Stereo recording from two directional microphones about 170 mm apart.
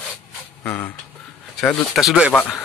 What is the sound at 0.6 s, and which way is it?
Speech, 10° left (ahead or behind).